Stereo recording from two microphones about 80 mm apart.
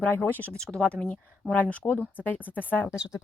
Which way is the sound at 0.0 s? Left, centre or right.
Left.